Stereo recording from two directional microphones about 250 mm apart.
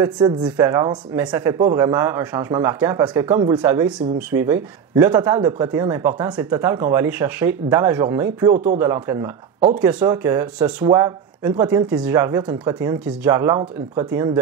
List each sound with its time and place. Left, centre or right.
0.0 s speech: centre